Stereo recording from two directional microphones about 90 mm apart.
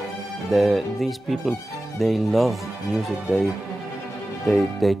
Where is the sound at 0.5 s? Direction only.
Centre (ahead or behind).